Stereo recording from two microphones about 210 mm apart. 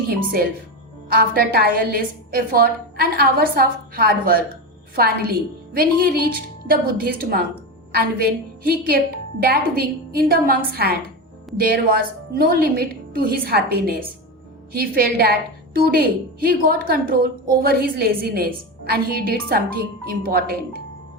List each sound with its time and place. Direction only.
1.1 s a woman's voice: 45° right (ahead or behind)